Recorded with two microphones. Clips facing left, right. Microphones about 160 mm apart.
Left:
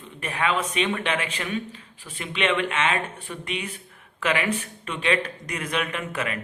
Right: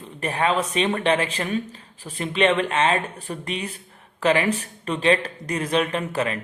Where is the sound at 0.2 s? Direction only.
35° right (ahead or behind).